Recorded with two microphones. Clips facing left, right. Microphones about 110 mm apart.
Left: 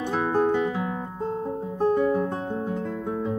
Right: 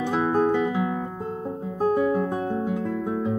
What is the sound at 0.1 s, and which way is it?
Music, 10° right (ahead or behind).